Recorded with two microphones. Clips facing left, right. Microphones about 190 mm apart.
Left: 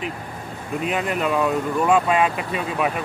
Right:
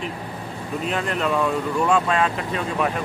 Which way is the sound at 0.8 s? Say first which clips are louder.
Left 1 dB; 5° left (ahead or behind).